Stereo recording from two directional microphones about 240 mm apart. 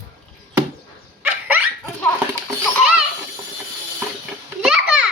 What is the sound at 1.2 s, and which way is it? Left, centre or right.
Dog, centre.